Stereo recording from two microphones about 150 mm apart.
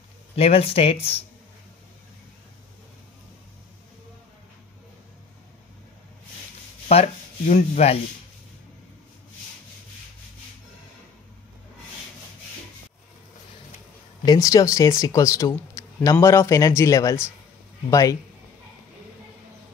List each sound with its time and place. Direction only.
0.4 s speech: 40° left (ahead or behind)
6.9 s speech: 45° left (ahead or behind)
14.2 s speech: 25° left (ahead or behind)